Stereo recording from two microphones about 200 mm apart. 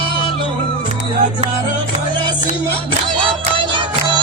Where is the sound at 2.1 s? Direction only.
20° right (ahead or behind).